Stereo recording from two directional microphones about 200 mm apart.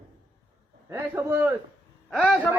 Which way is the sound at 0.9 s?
10° right (ahead or behind).